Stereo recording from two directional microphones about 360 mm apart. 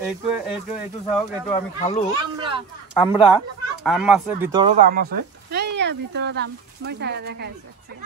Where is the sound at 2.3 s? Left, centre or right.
Centre.